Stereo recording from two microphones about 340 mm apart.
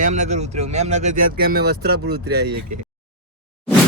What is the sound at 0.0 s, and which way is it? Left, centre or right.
Speech, right.